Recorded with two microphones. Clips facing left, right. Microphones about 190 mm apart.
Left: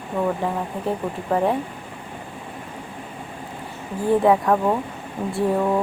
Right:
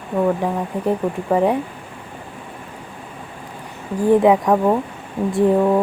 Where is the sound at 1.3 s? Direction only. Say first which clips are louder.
Right 4 dB; 10° right (ahead or behind).